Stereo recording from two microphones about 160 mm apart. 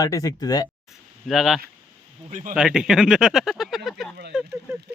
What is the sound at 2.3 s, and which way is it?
Speech, 55° right (ahead or behind).